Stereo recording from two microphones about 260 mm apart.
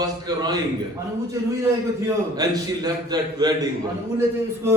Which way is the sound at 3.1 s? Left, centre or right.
Centre.